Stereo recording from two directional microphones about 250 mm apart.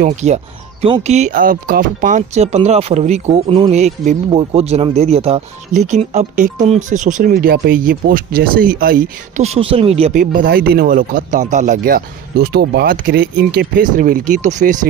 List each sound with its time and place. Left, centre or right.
0.0 s speech: right